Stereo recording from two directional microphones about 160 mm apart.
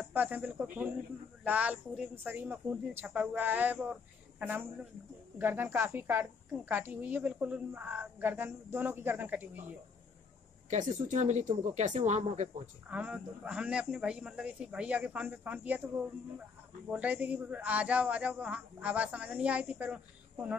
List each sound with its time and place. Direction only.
0.0 s a woman's voice: 10° right (ahead or behind)
10.7 s speech: 50° right (ahead or behind)
12.9 s a woman's voice: 10° right (ahead or behind)
16.9 s a woman's voice: 10° right (ahead or behind)